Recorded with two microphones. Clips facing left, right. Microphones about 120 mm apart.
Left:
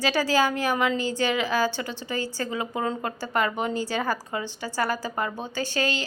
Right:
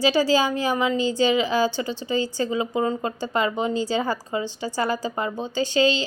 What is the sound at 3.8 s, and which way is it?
A woman's voice, 15° right (ahead or behind).